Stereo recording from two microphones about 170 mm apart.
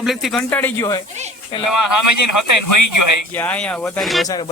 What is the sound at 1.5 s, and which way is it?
Speech, 30° left (ahead or behind).